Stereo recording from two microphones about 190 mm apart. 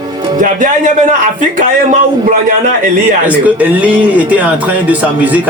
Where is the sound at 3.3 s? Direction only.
5° right (ahead or behind).